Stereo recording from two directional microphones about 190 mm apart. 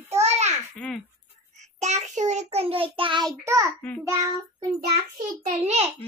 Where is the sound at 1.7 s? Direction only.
35° right (ahead or behind); by 3.8 s 15° right (ahead or behind).